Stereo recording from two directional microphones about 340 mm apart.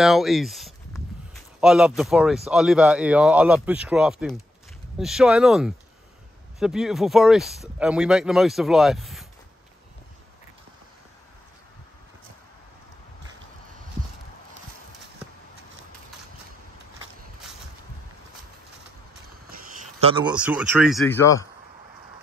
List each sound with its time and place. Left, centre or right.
0.0 s speech: centre
19.5 s a sound: centre
20.3 s speech: centre